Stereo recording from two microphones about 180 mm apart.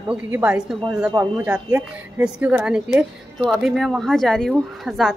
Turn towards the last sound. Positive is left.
turn(degrees=0)  # may be behind; listen again after turning